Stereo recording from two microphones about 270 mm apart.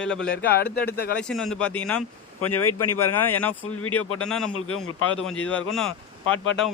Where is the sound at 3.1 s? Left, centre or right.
Centre.